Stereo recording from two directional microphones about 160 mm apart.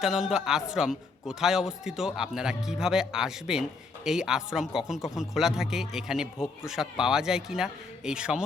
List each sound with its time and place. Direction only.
0.0 s speech: 5° right (ahead or behind)